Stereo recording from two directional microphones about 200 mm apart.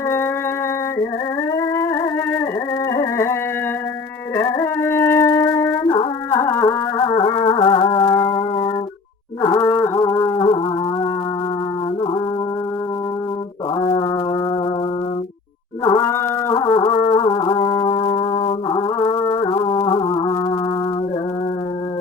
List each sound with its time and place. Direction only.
1.5 s music: 15° left (ahead or behind)
4.4 s music: 15° left (ahead or behind)
5.9 s music: 25° left (ahead or behind)
6.4 s music: 15° left (ahead or behind)
15.8 s a sound: 15° left (ahead or behind)
16.6 s music: 20° left (ahead or behind)